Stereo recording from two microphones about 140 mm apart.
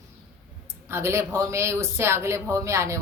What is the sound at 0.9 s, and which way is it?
Speech, 20° right (ahead or behind).